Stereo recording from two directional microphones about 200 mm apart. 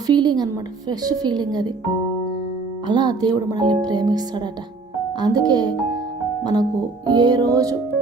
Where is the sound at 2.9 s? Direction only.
20° right (ahead or behind).